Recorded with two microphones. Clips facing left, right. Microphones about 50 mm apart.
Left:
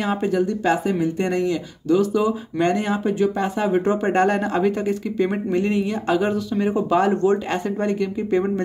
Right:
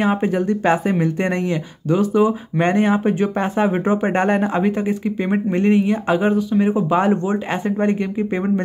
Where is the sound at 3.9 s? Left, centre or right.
Right.